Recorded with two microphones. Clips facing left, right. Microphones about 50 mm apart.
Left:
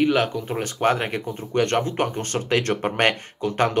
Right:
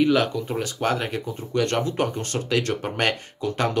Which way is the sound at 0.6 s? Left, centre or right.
Left.